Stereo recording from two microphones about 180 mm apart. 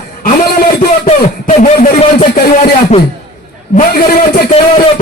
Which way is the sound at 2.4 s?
55° left (ahead or behind).